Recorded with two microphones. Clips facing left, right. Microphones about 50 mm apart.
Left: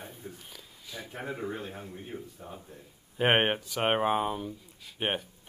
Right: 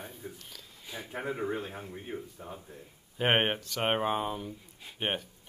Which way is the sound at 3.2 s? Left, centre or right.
Centre.